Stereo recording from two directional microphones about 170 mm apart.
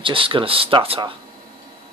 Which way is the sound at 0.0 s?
30° right (ahead or behind).